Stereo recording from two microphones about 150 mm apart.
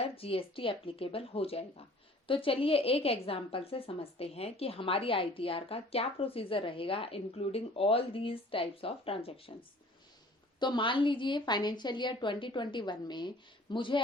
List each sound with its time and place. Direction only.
0.0 s a woman's voice: 40° left (ahead or behind)